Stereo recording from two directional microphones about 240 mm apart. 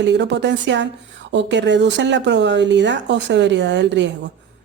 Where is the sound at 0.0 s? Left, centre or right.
Right.